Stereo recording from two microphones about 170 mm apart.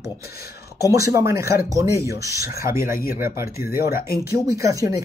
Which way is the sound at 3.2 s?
60° left (ahead or behind).